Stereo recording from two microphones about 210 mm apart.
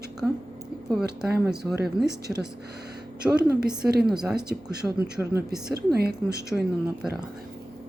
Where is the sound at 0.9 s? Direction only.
Centre (ahead or behind).